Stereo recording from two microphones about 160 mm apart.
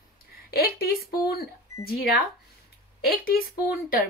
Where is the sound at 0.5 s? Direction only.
70° left (ahead or behind).